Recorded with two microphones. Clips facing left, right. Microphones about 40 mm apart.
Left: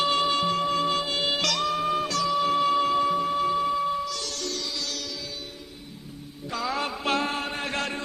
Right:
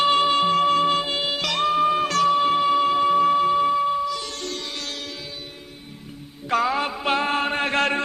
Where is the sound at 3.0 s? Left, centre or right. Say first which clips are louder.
Right 7 dB; right.